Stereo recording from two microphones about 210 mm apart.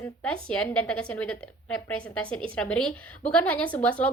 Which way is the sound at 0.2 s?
5° left (ahead or behind).